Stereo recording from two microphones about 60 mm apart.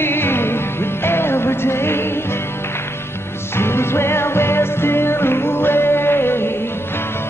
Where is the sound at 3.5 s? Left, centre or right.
Left.